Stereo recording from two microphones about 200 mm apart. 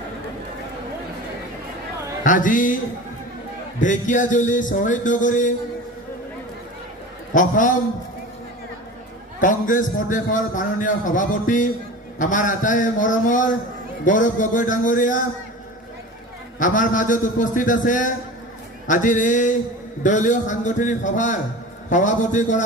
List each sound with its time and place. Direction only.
2.2 s a man's voice: 40° left (ahead or behind)
3.8 s a man's voice: 40° left (ahead or behind)
7.3 s a man's voice: 40° left (ahead or behind)
9.4 s a man's voice: 40° left (ahead or behind)
16.5 s a man's voice: 40° left (ahead or behind)